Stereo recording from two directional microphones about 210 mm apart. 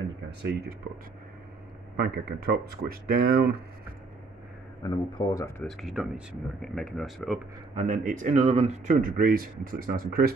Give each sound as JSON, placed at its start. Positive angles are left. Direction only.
{"t": 0.4, "sound": "speech", "side_deg": -50}
{"t": 2.0, "sound": "speech", "side_deg": -45}
{"t": 4.8, "sound": "speech", "side_deg": 15}
{"t": 5.7, "sound": "speech", "side_deg": 0}
{"t": 7.8, "sound": "speech", "side_deg": -40}